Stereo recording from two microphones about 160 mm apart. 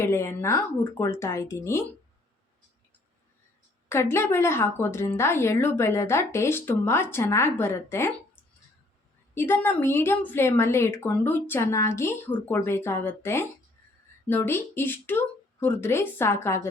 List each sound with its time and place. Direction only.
0.0 s a woman's voice: 15° left (ahead or behind)
3.8 s a woman's voice: 15° left (ahead or behind)
9.3 s a woman's voice: 15° left (ahead or behind)